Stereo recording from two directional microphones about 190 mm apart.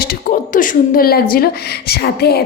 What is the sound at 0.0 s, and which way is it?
Speech, 50° left (ahead or behind).